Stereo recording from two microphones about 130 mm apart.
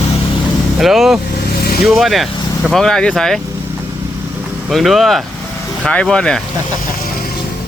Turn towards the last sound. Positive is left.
turn(degrees=5)  # may be behind; listen again after turning